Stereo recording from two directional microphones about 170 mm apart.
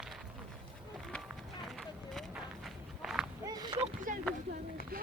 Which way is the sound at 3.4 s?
25° right (ahead or behind).